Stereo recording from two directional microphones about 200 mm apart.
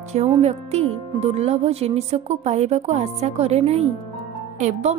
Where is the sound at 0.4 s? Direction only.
35° right (ahead or behind).